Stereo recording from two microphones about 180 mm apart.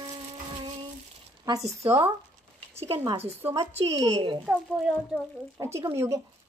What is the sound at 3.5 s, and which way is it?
Speech, 35° right (ahead or behind).